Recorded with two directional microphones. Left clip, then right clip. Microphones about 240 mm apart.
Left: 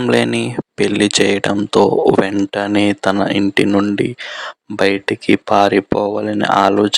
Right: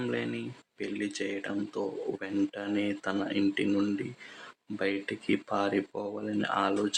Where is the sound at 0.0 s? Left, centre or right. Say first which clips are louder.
Left 19 dB; left.